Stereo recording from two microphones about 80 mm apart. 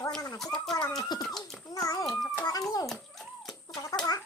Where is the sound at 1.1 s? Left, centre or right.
Left.